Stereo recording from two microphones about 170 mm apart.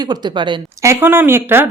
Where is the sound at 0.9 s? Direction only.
15° right (ahead or behind).